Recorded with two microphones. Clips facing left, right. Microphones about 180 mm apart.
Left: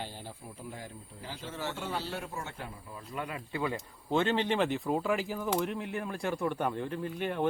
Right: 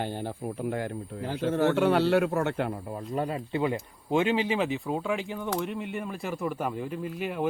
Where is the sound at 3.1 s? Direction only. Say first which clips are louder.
Right 7 dB; 30° right (ahead or behind); by 7.5 s 5° right (ahead or behind).